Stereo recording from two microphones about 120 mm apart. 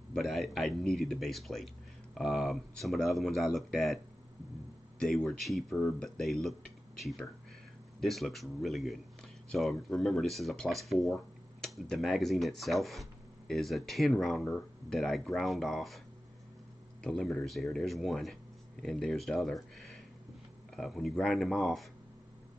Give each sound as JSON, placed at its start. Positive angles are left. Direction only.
{"t": 0.1, "sound": "speech", "side_deg": 0}
{"t": 17.0, "sound": "speech", "side_deg": 5}